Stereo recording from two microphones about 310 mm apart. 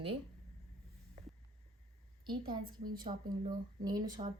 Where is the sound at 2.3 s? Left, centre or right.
Centre.